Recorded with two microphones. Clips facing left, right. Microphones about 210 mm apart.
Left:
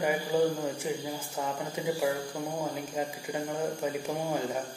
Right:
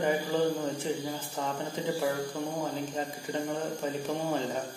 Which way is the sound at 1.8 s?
10° left (ahead or behind).